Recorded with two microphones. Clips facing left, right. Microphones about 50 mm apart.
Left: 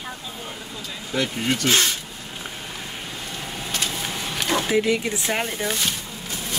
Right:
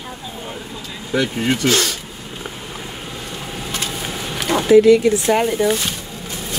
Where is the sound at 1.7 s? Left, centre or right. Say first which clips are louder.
Right 3 dB; left.